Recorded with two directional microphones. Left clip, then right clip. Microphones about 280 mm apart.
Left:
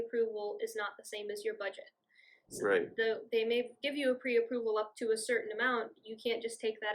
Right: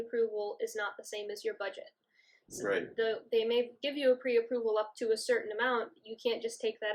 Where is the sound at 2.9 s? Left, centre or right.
Centre.